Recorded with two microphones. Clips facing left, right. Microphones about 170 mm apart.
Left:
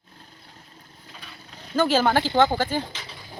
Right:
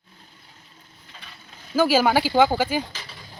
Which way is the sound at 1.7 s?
10° right (ahead or behind).